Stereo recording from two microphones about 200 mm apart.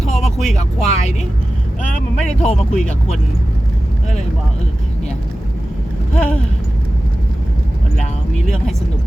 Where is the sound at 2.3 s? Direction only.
35° left (ahead or behind).